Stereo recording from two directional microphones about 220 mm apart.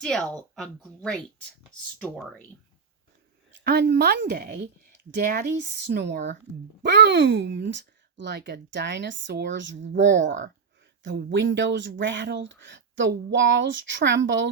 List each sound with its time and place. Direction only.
0.0 s speech: 5° left (ahead or behind)
3.6 s speech: 45° right (ahead or behind)